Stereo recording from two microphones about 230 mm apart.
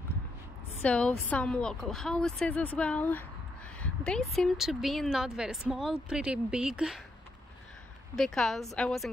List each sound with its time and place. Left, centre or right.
0.8 s a woman's voice: centre
8.2 s a woman's voice: centre